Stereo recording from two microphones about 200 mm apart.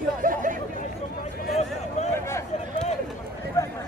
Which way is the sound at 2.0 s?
35° left (ahead or behind).